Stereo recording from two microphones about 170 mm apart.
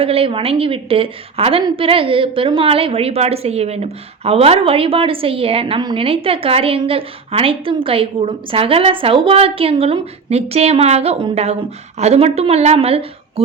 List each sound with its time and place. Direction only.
0.0 s a woman's voice: 35° right (ahead or behind)